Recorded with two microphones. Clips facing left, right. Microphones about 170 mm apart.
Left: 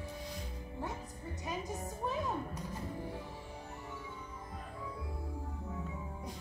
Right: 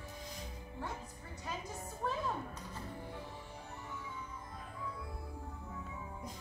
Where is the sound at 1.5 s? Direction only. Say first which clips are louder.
Left 3 dB; 15° left (ahead or behind).